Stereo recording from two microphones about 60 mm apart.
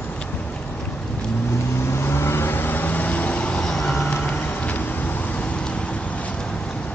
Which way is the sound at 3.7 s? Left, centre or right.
Centre.